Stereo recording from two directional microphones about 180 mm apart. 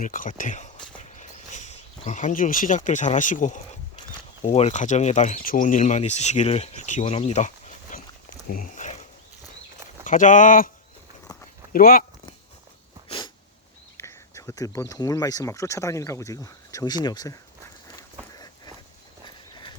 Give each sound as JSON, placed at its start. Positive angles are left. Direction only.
{"t": 0.0, "sound": "speech", "side_deg": 45}
{"t": 0.9, "sound": "a sound", "side_deg": 40}
{"t": 4.5, "sound": "speech", "side_deg": 40}
{"t": 7.0, "sound": "a sound", "side_deg": 35}
{"t": 10.0, "sound": "speech", "side_deg": 45}
{"t": 11.7, "sound": "speech", "side_deg": 55}
{"t": 13.1, "sound": "sneeze", "side_deg": 25}
{"t": 13.9, "sound": "speech", "side_deg": 15}
{"t": 18.3, "sound": "a sound", "side_deg": 20}